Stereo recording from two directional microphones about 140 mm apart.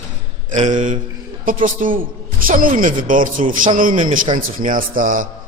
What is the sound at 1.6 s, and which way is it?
A man's voice, 75° right (ahead or behind).